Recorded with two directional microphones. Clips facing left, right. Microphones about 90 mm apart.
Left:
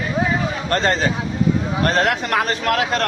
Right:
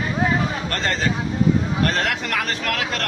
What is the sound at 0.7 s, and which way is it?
A man's voice, 30° left (ahead or behind).